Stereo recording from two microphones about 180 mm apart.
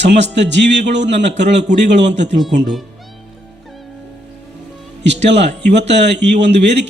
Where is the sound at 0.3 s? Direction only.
75° right (ahead or behind).